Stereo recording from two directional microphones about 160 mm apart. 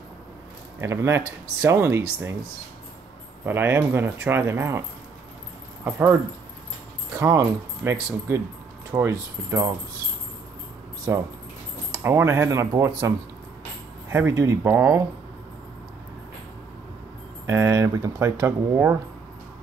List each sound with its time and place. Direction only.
0.7 s speech: 15° right (ahead or behind)
3.4 s speech: 15° right (ahead or behind)
5.9 s speech: 15° right (ahead or behind)
7.2 s speech: 20° right (ahead or behind)
11.9 s speech: 15° right (ahead or behind)
17.5 s speech: 20° right (ahead or behind)